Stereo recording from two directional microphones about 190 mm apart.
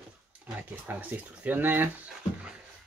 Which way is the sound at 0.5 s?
10° right (ahead or behind).